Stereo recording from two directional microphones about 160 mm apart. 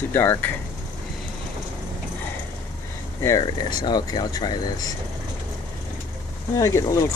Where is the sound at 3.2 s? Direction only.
20° left (ahead or behind).